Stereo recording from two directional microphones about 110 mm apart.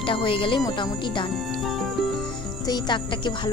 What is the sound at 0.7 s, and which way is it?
Speech, 45° left (ahead or behind).